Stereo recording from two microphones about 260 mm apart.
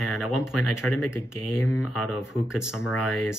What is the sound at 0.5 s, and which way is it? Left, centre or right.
Speech, left.